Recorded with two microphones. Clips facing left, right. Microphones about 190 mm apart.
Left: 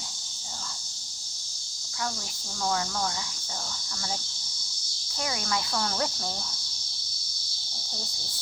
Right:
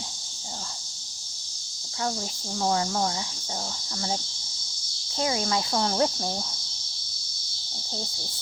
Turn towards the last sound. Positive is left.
turn(degrees=-25)  # may be behind; listen again after turning